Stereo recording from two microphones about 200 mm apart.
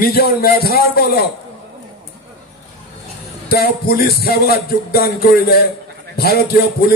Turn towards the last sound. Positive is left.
turn(degrees=50)  # may be behind; listen again after turning